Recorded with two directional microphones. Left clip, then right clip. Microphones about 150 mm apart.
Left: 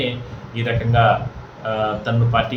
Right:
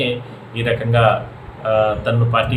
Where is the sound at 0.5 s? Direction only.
10° right (ahead or behind).